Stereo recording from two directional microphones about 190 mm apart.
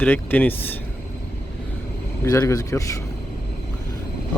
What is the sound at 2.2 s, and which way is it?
Speech, 15° left (ahead or behind).